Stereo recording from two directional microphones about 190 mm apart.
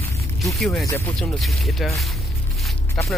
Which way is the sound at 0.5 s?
Centre (ahead or behind).